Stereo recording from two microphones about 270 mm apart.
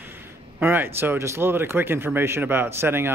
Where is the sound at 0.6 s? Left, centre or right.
Centre.